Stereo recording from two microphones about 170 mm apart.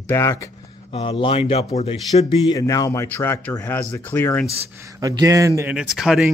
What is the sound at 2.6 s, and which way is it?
Speech, 20° left (ahead or behind).